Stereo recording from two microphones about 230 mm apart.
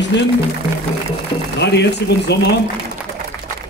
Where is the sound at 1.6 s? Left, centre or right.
Left.